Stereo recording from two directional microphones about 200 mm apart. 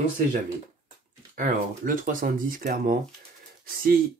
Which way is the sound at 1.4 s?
45° right (ahead or behind).